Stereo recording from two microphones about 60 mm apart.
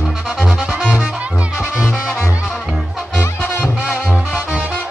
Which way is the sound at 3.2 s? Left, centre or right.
Left.